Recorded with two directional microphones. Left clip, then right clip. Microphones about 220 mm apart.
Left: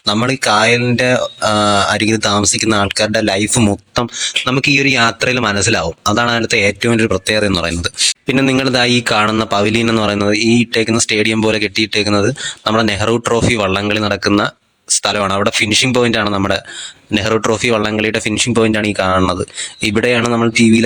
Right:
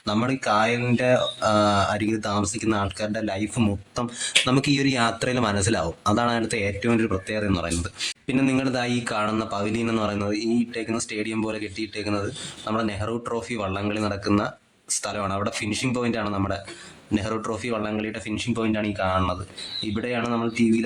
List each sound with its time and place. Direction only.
0.0 s speech: 30° left (ahead or behind)
4.2 s speech: 20° left (ahead or behind); by 20.8 s 35° left (ahead or behind)